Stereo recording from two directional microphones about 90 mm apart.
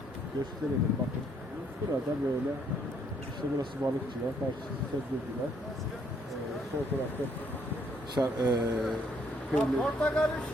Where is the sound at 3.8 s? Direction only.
40° right (ahead or behind).